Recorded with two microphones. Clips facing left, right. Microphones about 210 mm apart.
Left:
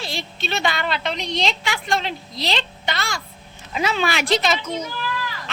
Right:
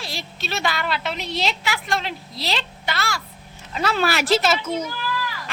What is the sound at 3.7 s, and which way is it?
A woman's voice, centre (ahead or behind).